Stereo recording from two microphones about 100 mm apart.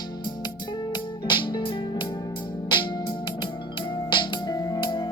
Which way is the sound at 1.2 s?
55° left (ahead or behind).